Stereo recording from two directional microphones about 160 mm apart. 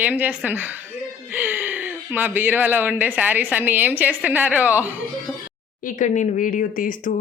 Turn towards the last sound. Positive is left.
turn(degrees=55)  # may be behind; listen again after turning